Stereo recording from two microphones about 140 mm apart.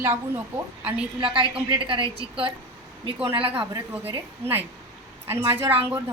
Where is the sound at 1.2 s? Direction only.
40° right (ahead or behind).